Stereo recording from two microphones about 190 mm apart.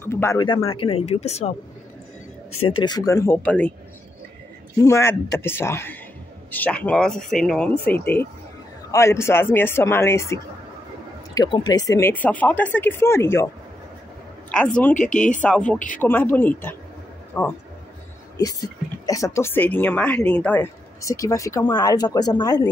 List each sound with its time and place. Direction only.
0.0 s speech: 15° left (ahead or behind); by 1.5 s 35° left (ahead or behind)
2.8 s speech: 20° left (ahead or behind)
4.8 s speech: 15° left (ahead or behind)
14.5 s speech: 5° left (ahead or behind)